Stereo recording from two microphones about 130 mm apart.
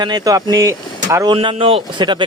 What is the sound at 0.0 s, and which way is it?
Speech, 30° right (ahead or behind).